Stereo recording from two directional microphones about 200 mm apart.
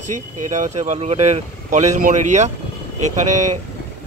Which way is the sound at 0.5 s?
35° right (ahead or behind).